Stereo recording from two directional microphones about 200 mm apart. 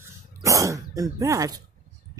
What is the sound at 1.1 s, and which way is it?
Speech, 15° right (ahead or behind).